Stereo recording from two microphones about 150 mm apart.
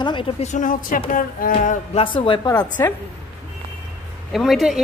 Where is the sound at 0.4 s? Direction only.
55° left (ahead or behind).